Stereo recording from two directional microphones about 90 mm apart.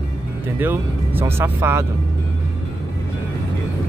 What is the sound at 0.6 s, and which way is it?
Speech, 20° right (ahead or behind).